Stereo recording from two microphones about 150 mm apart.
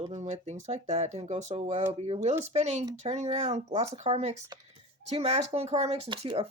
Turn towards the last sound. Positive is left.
turn(degrees=-35)  # may be behind; listen again after turning